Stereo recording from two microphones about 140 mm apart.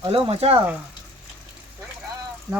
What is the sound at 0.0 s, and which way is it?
Speech, 45° right (ahead or behind).